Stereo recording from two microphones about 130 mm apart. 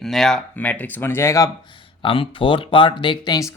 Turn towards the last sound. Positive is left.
turn(degrees=30)  # may be behind; listen again after turning